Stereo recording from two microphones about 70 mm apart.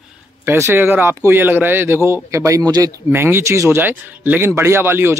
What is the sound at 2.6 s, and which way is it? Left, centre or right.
Speech, right.